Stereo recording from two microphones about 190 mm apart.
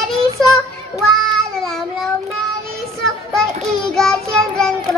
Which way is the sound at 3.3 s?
Centre (ahead or behind).